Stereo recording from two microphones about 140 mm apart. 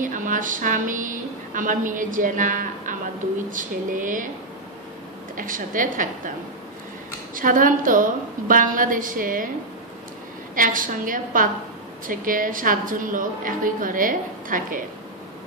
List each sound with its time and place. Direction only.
0.0 s a woman's voice: 70° right (ahead or behind)
5.3 s a woman's voice: 75° right (ahead or behind)
7.3 s a woman's voice: 75° right (ahead or behind)
10.5 s a woman's voice: 75° right (ahead or behind)